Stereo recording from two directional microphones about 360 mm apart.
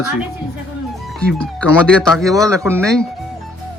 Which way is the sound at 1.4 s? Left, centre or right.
Centre.